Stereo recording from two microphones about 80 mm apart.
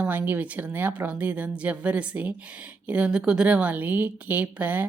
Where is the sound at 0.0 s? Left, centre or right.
Right.